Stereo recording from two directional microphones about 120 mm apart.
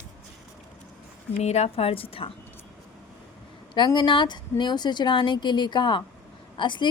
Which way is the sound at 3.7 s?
40° left (ahead or behind).